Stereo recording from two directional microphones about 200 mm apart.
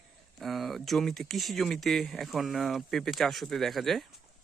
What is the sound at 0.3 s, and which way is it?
Speech, centre (ahead or behind).